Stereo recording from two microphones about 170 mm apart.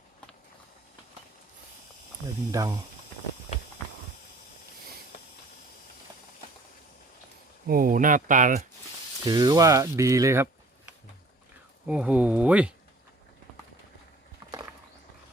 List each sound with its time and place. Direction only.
2.5 s speech: 20° right (ahead or behind)
7.7 s speech: 55° right (ahead or behind)
9.2 s speech: 25° right (ahead or behind)
11.9 s speech: 5° right (ahead or behind)